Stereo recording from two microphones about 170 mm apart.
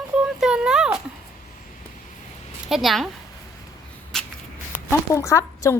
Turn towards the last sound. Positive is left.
turn(degrees=20)  # may be behind; listen again after turning